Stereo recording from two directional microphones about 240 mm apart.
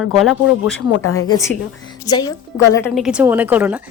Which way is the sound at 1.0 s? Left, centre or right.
Left.